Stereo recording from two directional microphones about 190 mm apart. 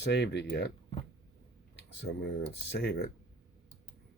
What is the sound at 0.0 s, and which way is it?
Speech, 60° left (ahead or behind).